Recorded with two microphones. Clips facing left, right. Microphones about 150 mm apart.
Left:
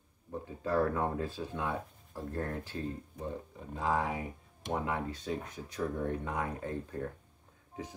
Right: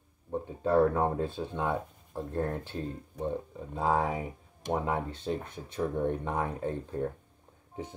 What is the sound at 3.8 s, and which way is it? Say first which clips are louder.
Speech: right 4 dB; 30° right (ahead or behind).